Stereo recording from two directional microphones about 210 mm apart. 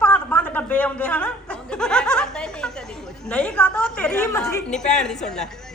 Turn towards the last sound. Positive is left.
turn(degrees=0)  # may be behind; listen again after turning